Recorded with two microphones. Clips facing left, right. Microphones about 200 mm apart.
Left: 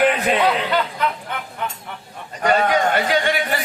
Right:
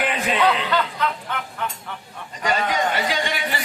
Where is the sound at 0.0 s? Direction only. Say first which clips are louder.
Left 6 dB; 50° left (ahead or behind).